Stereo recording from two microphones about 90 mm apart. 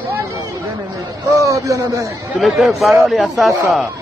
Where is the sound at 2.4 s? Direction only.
Centre (ahead or behind).